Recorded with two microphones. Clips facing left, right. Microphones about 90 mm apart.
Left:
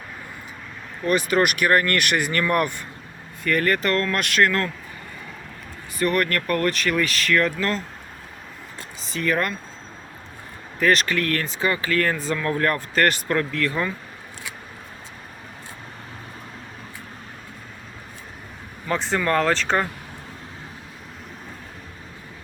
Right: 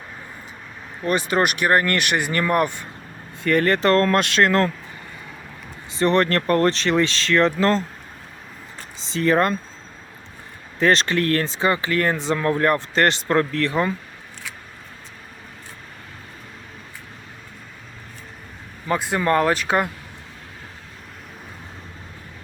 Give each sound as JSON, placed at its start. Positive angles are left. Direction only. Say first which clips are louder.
{"t": 1.0, "sound": "speech", "louder": "even", "side_deg": -30}
{"t": 5.9, "sound": "speech", "louder": "right 4 dB", "side_deg": -25}
{"t": 9.0, "sound": "speech", "louder": "right 5 dB", "side_deg": -30}
{"t": 10.8, "sound": "speech", "louder": "right 2 dB", "side_deg": -30}
{"t": 13.7, "sound": "speech", "louder": "right 4 dB", "side_deg": -25}
{"t": 18.9, "sound": "speech", "louder": "right 2 dB", "side_deg": -10}